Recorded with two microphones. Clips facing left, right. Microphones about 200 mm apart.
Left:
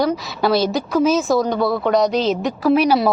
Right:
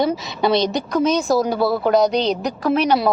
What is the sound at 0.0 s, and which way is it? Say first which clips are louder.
A woman's voice: even; 5° left (ahead or behind).